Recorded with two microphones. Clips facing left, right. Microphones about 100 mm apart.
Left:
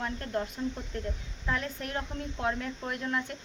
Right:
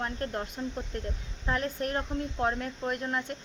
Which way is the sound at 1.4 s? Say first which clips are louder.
Right 3 dB; 40° right (ahead or behind).